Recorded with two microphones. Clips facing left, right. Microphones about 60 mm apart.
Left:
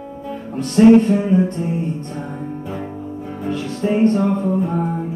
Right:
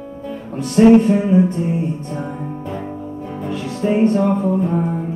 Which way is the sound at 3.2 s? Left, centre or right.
Centre.